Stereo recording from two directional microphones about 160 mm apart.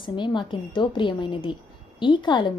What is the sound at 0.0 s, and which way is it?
A woman's voice, 30° left (ahead or behind).